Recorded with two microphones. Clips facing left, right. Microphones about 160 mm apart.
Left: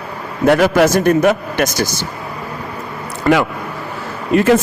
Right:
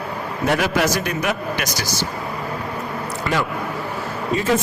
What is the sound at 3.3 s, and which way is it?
Speech, 50° left (ahead or behind).